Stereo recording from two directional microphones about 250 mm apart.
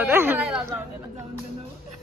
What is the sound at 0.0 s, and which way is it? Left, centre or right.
Speech, centre.